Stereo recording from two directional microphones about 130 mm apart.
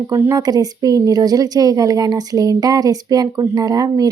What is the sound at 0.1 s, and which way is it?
Speech, 25° right (ahead or behind).